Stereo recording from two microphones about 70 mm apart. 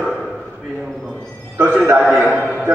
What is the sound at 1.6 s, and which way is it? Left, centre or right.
Speech, right.